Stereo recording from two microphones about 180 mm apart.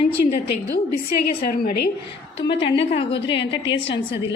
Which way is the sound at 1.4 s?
50° left (ahead or behind).